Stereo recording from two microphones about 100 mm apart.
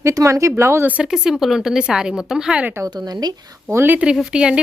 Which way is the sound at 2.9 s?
45° right (ahead or behind).